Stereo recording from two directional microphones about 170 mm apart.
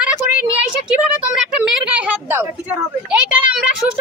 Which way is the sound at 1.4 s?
5° right (ahead or behind).